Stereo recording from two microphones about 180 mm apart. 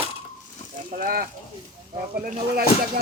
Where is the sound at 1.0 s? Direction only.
55° right (ahead or behind).